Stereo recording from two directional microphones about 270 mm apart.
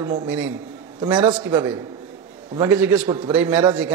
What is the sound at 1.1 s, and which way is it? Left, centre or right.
Mantra, centre.